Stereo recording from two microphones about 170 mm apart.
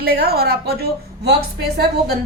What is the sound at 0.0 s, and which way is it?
A woman's voice, 65° right (ahead or behind).